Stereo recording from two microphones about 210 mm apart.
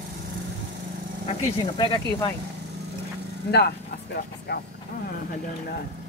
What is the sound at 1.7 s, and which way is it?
Speech, 25° left (ahead or behind).